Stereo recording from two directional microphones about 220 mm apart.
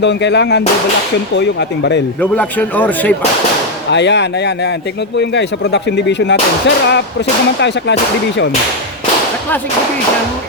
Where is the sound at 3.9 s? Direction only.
50° left (ahead or behind).